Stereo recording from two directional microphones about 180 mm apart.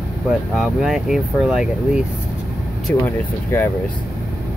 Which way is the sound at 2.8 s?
10° left (ahead or behind).